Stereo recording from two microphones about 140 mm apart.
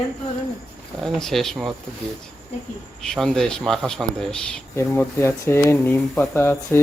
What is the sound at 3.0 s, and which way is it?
Speech, 5° left (ahead or behind).